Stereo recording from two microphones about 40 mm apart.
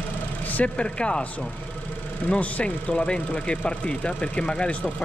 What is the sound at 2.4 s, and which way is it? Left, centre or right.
Speech, left.